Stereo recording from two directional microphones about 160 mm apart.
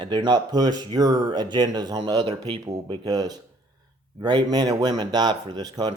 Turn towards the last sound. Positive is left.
turn(degrees=-25)  # may be behind; listen again after turning